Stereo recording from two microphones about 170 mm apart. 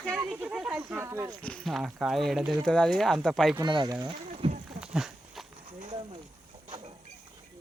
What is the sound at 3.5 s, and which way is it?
Speech, 25° right (ahead or behind).